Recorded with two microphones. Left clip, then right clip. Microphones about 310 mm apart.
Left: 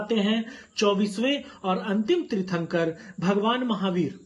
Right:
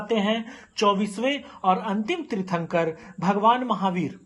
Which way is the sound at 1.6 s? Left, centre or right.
Right.